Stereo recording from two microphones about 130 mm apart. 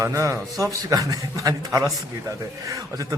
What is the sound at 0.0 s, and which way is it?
A man's voice, 25° right (ahead or behind).